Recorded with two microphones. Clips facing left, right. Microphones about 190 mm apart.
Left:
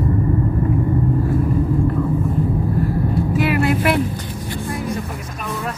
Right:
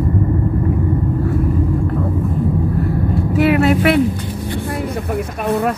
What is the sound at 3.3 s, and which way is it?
Vehicle, 60° right (ahead or behind).